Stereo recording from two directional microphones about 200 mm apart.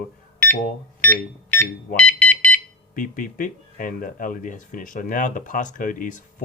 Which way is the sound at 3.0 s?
45° left (ahead or behind).